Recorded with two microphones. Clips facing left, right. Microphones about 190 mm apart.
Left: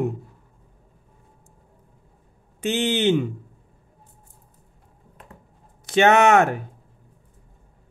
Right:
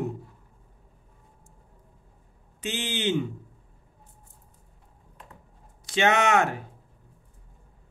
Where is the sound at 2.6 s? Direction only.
60° left (ahead or behind).